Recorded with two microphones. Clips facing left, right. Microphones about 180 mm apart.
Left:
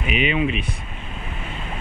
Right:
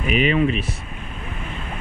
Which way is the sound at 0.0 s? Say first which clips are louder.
Right 3 dB; 40° right (ahead or behind).